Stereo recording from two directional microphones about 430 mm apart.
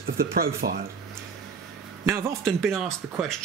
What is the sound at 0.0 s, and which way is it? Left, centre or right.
Speech, right.